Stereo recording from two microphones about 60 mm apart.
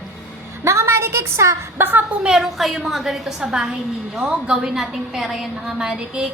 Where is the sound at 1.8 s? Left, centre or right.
Right.